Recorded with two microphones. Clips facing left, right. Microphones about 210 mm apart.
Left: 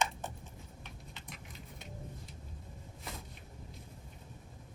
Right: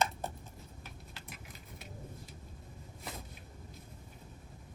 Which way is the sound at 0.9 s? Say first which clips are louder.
Even; 5° right (ahead or behind).